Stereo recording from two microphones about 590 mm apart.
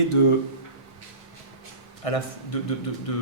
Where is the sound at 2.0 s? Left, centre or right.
Left.